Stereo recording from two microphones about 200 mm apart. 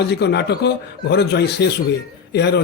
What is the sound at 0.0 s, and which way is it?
A man's voice, 60° left (ahead or behind).